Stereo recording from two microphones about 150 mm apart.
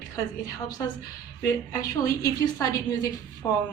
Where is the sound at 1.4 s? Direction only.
25° left (ahead or behind).